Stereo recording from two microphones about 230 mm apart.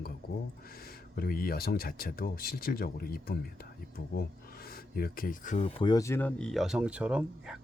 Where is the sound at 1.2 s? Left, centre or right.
Left.